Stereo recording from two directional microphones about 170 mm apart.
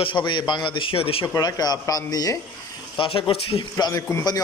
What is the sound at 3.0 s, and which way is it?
Speech, 30° left (ahead or behind).